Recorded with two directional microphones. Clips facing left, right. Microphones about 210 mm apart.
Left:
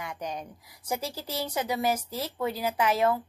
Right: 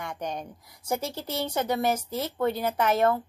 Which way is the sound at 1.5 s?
10° left (ahead or behind).